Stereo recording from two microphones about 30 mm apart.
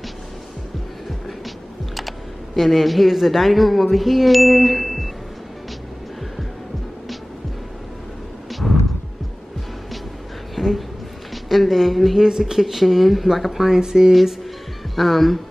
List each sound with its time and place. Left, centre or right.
2.0 s speech: centre
8.5 s a sound: centre
10.5 s a sound: centre
11.4 s speech: centre
12.2 s speech: centre
12.5 s speech: centre
13.7 s speech: centre
15.0 s speech: centre